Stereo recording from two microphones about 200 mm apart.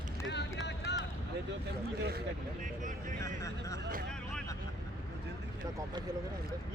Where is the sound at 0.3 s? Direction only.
60° left (ahead or behind).